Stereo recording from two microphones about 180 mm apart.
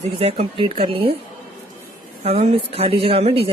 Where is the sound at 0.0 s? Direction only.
35° right (ahead or behind).